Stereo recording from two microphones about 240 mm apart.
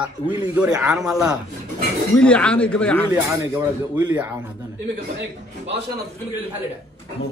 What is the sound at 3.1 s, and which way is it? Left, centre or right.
Speech, centre.